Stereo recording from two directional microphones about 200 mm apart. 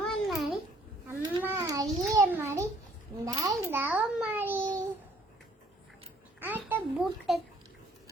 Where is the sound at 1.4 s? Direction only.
15° right (ahead or behind).